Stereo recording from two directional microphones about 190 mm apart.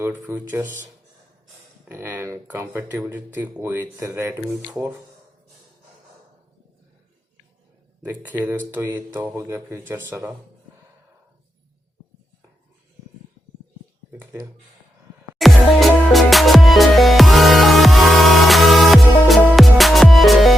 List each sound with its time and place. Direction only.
0.0 s speech: 10° right (ahead or behind)
8.0 s speech: 10° right (ahead or behind)
15.4 s music: centre (ahead or behind)